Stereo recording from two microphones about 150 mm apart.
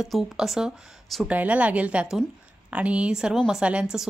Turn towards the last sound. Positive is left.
turn(degrees=-5)  # may be behind; listen again after turning